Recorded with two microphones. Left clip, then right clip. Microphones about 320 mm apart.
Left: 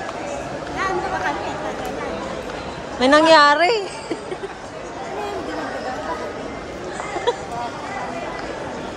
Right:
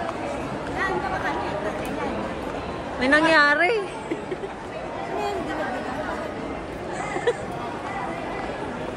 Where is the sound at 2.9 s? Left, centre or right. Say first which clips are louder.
Left 6 dB; centre.